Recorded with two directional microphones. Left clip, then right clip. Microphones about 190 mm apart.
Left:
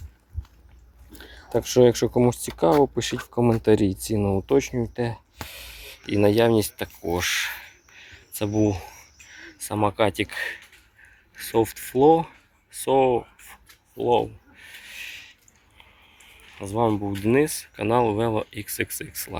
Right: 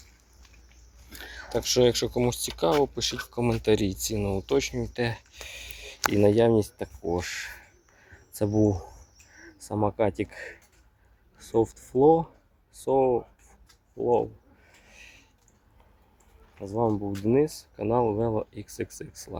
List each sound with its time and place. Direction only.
1.5 s speech: 30° left (ahead or behind)
4.9 s speech: 10° left (ahead or behind)
5.5 s speech: 5° right (ahead or behind)
8.0 s a sound: 25° right (ahead or behind)
8.6 s speech: 15° right (ahead or behind); by 13.6 s centre (ahead or behind)
14.8 s a sound: 5° right (ahead or behind)
16.9 s speech: 15° left (ahead or behind)
17.2 s speech: centre (ahead or behind)